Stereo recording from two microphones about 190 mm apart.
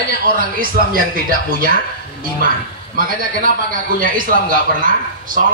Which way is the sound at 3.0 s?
50° right (ahead or behind).